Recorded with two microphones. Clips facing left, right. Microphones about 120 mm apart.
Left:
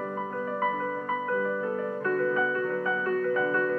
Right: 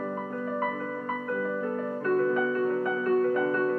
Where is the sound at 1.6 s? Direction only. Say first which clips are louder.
Even; 40° right (ahead or behind).